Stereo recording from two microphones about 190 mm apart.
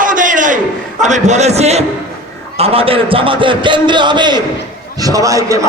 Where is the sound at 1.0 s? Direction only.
40° right (ahead or behind).